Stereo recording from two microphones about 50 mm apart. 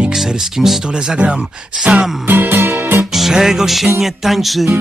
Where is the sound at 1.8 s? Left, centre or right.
Right.